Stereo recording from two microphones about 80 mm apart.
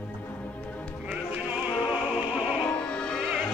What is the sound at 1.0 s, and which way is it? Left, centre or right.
Music, centre.